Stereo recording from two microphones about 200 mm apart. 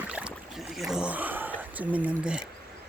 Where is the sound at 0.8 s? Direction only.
5° right (ahead or behind).